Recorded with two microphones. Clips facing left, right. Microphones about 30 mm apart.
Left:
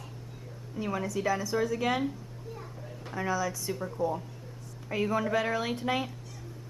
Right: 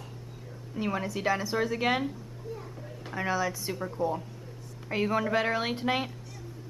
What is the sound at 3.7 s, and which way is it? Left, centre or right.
A woman's voice, centre.